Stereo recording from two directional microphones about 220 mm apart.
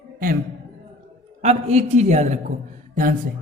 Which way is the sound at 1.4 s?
30° right (ahead or behind).